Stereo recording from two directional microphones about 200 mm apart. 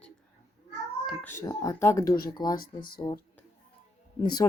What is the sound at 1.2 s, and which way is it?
Speech, 15° left (ahead or behind).